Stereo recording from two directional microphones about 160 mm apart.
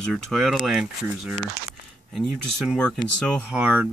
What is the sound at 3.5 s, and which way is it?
Speech, 10° right (ahead or behind).